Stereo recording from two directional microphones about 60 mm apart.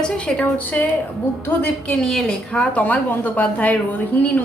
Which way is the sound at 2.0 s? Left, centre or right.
Centre.